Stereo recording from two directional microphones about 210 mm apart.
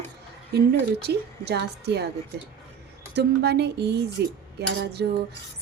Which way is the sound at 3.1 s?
50° right (ahead or behind).